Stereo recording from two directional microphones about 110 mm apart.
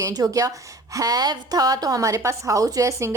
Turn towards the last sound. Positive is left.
turn(degrees=-25)  # may be behind; listen again after turning